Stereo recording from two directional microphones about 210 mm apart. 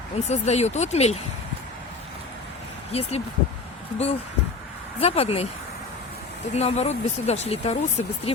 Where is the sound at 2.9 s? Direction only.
30° left (ahead or behind).